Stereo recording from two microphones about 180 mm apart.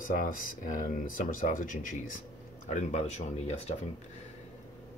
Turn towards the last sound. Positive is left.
turn(degrees=40)  # may be behind; listen again after turning